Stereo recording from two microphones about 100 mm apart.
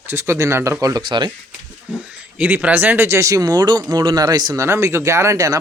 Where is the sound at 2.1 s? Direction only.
15° right (ahead or behind); by 4.6 s 40° right (ahead or behind).